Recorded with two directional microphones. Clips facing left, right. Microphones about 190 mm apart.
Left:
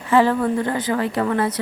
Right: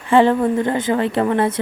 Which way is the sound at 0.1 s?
25° right (ahead or behind).